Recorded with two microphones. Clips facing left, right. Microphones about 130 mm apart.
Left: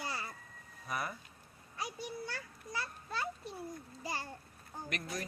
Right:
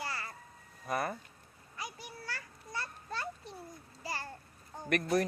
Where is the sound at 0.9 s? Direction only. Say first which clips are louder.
Right 5 dB; 50° right (ahead or behind).